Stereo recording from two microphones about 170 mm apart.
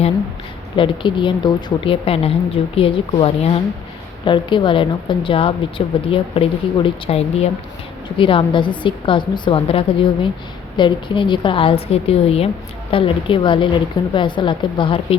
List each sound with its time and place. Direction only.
0.8 s a woman's voice: 30° left (ahead or behind)